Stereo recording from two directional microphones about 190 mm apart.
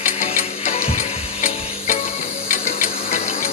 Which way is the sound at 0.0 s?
40° left (ahead or behind).